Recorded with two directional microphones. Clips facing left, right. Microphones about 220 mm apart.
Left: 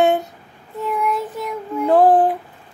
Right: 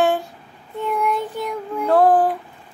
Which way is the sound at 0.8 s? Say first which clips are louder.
Even; centre (ahead or behind).